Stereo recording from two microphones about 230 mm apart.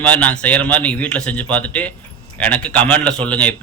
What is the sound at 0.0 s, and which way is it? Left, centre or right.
Speech, centre.